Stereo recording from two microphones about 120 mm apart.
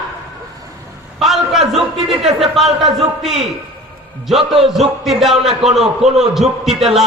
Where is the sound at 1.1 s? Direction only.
Centre (ahead or behind).